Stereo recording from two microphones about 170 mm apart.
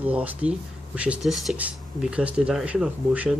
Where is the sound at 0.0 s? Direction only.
10° right (ahead or behind).